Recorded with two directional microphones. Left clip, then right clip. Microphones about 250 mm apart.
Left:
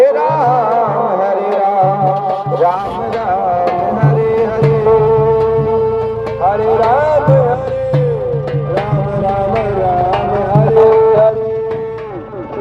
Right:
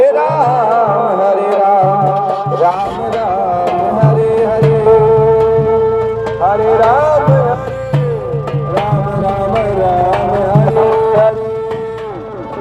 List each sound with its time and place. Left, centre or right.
0.0 s music: centre
0.4 s music: right
3.7 s music: right
9.6 s music: centre